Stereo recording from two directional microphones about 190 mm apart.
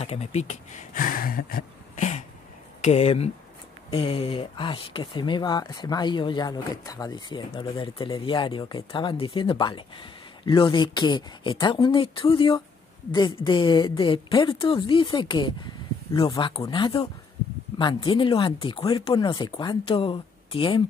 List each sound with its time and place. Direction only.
0.0 s speech: 35° left (ahead or behind)